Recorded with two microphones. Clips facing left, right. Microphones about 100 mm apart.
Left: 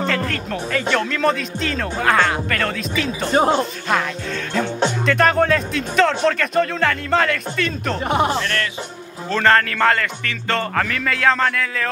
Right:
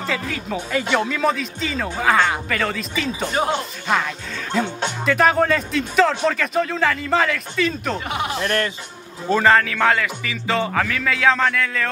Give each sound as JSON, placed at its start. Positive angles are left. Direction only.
{"t": 0.0, "sound": "speech", "side_deg": -5}
{"t": 3.3, "sound": "speech", "side_deg": 35}
{"t": 5.0, "sound": "speech", "side_deg": -5}
{"t": 8.1, "sound": "speech", "side_deg": 40}
{"t": 8.4, "sound": "music", "side_deg": -30}
{"t": 9.3, "sound": "speech", "side_deg": -5}